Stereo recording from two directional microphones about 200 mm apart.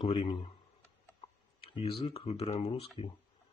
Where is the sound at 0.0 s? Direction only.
30° left (ahead or behind).